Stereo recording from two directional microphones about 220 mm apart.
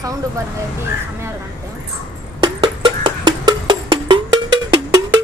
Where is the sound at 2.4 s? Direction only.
20° right (ahead or behind).